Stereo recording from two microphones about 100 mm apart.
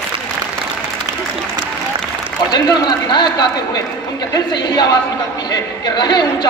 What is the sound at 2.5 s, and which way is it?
A woman's voice, 45° left (ahead or behind).